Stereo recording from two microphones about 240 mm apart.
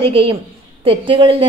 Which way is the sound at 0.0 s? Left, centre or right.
Right.